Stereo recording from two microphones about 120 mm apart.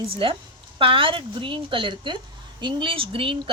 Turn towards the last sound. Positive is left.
turn(degrees=-50)  # may be behind; listen again after turning